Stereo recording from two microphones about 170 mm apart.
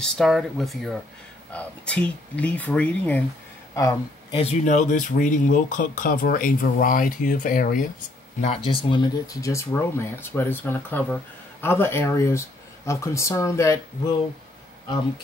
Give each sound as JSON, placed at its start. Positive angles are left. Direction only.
{"t": 0.0, "sound": "speech", "side_deg": 0}
{"t": 4.3, "sound": "speech", "side_deg": 35}
{"t": 8.4, "sound": "speech", "side_deg": 35}
{"t": 9.4, "sound": "speech", "side_deg": 15}